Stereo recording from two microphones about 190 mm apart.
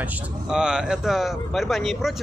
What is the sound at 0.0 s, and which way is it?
Speech, 5° right (ahead or behind).